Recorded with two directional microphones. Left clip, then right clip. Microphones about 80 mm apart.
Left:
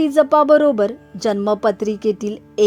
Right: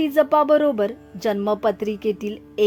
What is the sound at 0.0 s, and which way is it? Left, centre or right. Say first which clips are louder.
Speech: left 4 dB; left.